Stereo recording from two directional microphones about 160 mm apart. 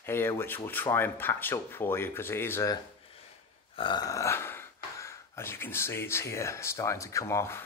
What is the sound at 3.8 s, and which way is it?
Speech, 25° left (ahead or behind).